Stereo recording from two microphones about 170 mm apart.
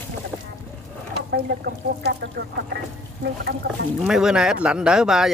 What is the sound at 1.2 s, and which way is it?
Speech, 70° right (ahead or behind).